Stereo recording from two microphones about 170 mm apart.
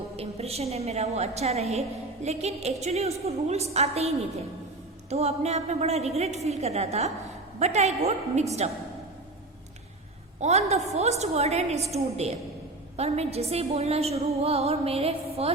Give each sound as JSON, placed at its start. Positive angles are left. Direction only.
{"t": 0.2, "sound": "a woman's voice", "side_deg": -35}
{"t": 10.4, "sound": "a woman's voice", "side_deg": -40}